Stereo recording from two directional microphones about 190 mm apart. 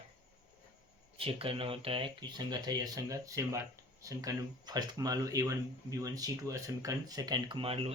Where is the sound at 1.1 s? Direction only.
30° right (ahead or behind).